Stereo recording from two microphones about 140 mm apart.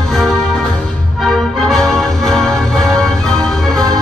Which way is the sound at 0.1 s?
5° left (ahead or behind).